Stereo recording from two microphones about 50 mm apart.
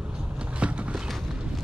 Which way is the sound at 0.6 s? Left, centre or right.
Right.